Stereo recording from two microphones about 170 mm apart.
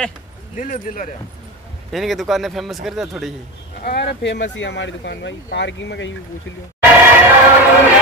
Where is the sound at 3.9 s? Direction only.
85° left.